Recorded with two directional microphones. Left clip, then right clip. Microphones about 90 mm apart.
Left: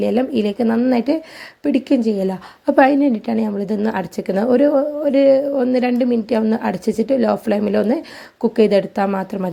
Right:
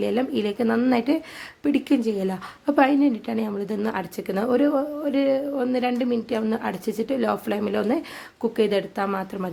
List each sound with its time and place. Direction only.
0.0 s a woman's voice: 30° left (ahead or behind)
2.6 s a woman's voice: 45° left (ahead or behind)
7.2 s a woman's voice: 35° left (ahead or behind)
8.4 s a woman's voice: 50° left (ahead or behind)